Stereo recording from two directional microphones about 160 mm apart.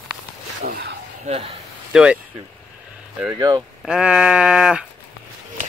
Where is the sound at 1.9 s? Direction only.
5° right (ahead or behind).